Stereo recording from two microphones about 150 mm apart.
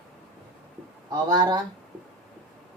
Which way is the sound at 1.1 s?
30° right (ahead or behind).